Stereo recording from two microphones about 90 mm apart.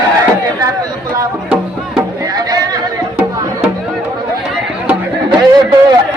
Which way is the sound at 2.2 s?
45° right (ahead or behind).